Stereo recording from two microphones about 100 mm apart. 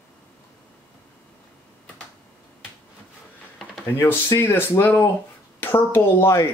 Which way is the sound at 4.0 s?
25° left (ahead or behind).